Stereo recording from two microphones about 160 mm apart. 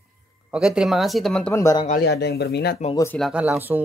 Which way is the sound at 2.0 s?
90° left.